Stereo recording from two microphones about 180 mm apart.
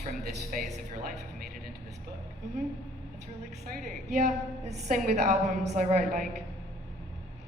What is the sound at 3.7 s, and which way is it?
A woman's voice, 40° right (ahead or behind).